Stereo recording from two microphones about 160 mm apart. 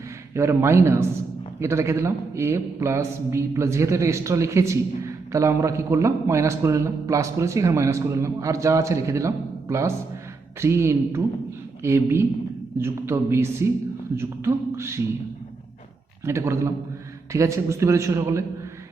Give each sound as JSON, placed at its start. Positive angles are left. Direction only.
{"t": 0.3, "sound": "a man's voice", "side_deg": -15}
{"t": 16.2, "sound": "a man's voice", "side_deg": -15}